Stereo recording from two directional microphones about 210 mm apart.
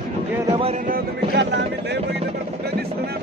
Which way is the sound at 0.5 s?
25° right (ahead or behind).